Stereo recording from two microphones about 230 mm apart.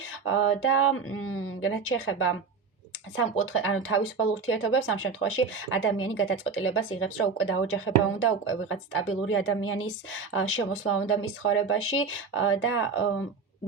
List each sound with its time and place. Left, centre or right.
0.3 s speech: left